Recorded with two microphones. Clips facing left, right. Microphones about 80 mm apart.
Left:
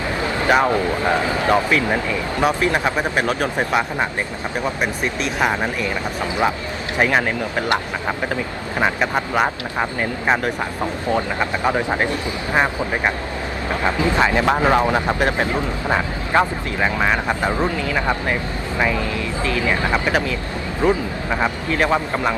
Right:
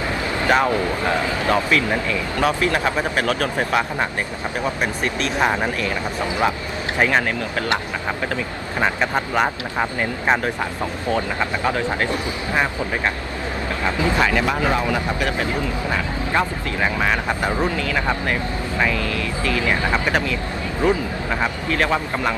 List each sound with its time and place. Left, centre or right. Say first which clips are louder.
0.4 s speech: left 1 dB; centre
7.0 s speech: left 1 dB; centre
8.8 s speech: left 1 dB; centre
11.1 s speech: left 1 dB; centre
13.8 s speech: left 2 dB; left
16.8 s speech: left 2 dB; centre
19.5 s speech: even; centre
20.8 s speech: left 1 dB; left
21.3 s speech: left 2 dB; centre